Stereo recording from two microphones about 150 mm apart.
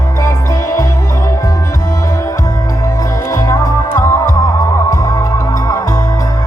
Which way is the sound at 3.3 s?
20° left (ahead or behind).